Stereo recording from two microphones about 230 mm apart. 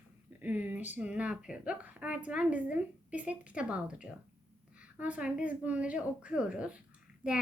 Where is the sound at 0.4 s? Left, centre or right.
Centre.